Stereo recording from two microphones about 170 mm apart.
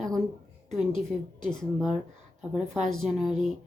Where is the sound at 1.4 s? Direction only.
5° left (ahead or behind).